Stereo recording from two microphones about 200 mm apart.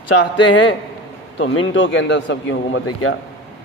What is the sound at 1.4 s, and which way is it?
A man's voice, 70° left (ahead or behind).